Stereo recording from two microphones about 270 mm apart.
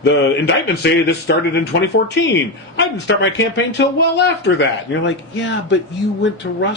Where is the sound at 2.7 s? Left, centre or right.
Left.